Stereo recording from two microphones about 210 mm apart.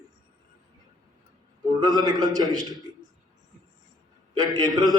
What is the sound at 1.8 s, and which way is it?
Speech, 20° right (ahead or behind).